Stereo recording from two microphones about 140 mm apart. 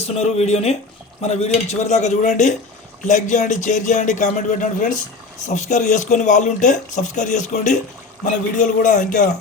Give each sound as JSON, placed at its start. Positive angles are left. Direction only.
{"t": 0.0, "sound": "a man's voice", "side_deg": 50}